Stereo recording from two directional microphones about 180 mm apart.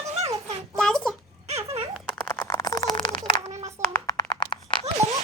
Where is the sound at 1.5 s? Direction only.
35° right (ahead or behind).